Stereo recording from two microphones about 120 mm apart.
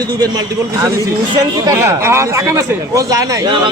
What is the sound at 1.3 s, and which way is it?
Speech, 35° right (ahead or behind).